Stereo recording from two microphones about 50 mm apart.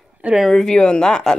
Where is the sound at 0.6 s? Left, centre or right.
Centre.